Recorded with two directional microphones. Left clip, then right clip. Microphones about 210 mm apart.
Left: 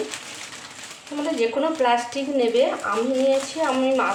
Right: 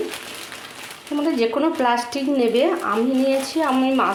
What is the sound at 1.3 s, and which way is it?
Speech, 45° right (ahead or behind).